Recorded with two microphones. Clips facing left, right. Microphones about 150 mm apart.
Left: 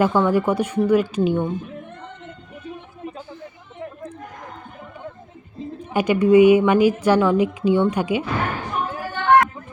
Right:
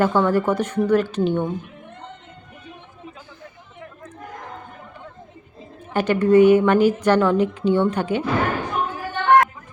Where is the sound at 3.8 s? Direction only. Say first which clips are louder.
Left 7 dB; 25° left (ahead or behind).